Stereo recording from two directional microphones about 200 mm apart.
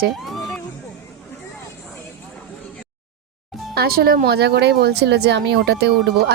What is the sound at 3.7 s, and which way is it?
Speech, 50° right (ahead or behind).